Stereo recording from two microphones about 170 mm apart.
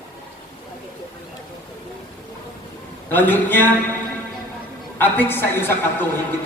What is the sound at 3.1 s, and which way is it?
Speech, 10° left (ahead or behind).